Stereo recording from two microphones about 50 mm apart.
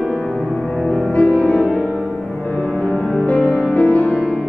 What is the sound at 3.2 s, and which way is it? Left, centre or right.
Music, left.